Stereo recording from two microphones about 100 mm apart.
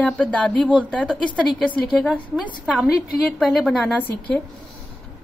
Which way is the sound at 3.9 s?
15° left (ahead or behind).